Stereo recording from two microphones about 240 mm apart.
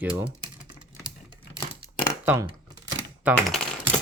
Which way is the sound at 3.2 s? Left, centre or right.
Centre.